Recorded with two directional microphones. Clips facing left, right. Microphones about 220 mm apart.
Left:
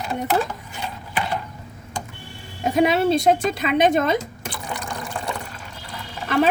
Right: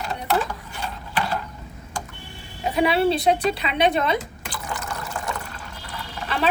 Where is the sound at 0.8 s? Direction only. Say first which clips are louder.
Even; 15° left (ahead or behind).